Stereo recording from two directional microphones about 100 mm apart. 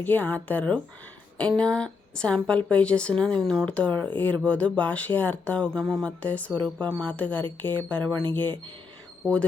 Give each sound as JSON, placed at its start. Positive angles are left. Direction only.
{"t": 0.0, "sound": "speech", "side_deg": 20}
{"t": 3.4, "sound": "speech", "side_deg": 0}
{"t": 3.7, "sound": "speech", "side_deg": 15}